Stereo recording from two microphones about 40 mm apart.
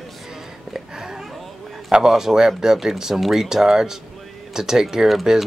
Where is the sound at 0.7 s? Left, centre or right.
Centre.